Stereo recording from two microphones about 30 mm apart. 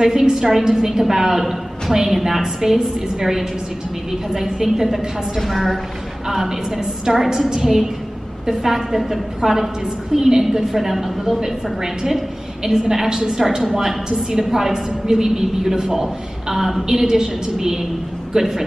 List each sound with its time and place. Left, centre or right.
0.0 s a woman's voice: centre
6.8 s a woman's voice: right